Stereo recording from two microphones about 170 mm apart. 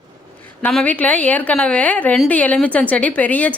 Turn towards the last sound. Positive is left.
turn(degrees=10)  # may be behind; listen again after turning